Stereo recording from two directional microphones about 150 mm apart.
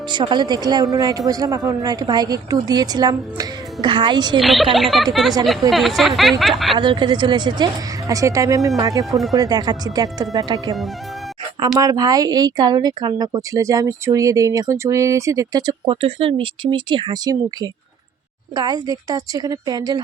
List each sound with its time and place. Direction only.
0.1 s speech: 30° right (ahead or behind)
4.4 s a woman's voice: centre (ahead or behind)
6.7 s speech: 30° right (ahead or behind)
9.0 s a woman's voice: centre (ahead or behind)
9.3 s speech: 25° right (ahead or behind)
11.8 s speech: 25° right (ahead or behind)